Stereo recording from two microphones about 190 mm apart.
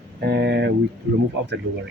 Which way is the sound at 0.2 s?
65° right (ahead or behind).